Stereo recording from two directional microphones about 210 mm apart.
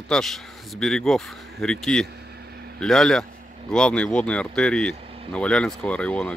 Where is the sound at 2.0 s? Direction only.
50° right (ahead or behind).